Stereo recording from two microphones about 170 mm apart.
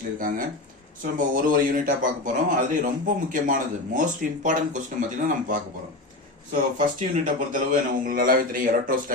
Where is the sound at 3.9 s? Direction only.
50° right (ahead or behind).